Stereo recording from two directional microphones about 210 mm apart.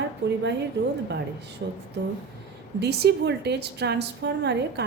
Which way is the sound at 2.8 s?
50° right (ahead or behind).